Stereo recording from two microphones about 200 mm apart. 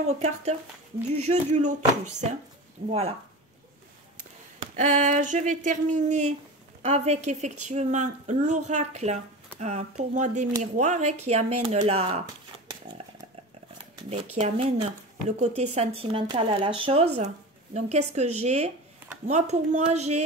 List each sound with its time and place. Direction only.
0.0 s a woman's voice: 35° right (ahead or behind)
5.0 s a woman's voice: 40° right (ahead or behind)
12.9 s chainsaw: 25° right (ahead or behind)
14.1 s a woman's voice: 30° right (ahead or behind)